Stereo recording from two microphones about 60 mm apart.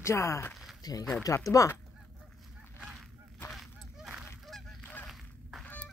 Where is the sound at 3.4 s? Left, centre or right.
Centre.